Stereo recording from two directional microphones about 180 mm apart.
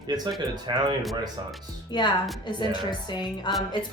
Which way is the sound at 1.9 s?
25° left (ahead or behind).